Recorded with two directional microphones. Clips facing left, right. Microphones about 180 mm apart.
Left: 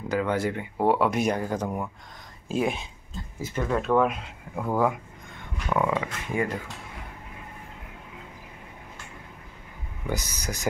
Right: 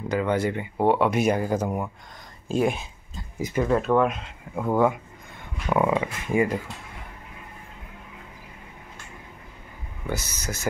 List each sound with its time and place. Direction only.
0.1 s speech: centre (ahead or behind)
3.3 s speech: 15° right (ahead or behind)
3.6 s speech: centre (ahead or behind)
5.7 s speech: 15° right (ahead or behind)
10.0 s speech: 15° left (ahead or behind)